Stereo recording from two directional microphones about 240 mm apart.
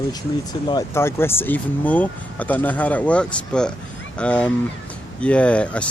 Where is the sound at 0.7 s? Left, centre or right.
Centre.